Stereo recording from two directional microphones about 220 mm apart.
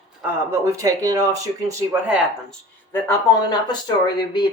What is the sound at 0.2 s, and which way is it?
Speech, 15° right (ahead or behind).